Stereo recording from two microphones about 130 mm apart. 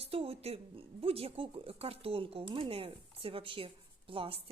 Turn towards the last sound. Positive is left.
turn(degrees=-45)  # may be behind; listen again after turning